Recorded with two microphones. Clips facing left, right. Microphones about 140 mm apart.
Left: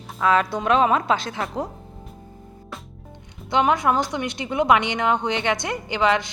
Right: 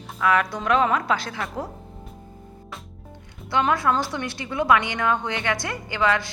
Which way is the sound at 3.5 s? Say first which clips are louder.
Left 2 dB; 20° left (ahead or behind).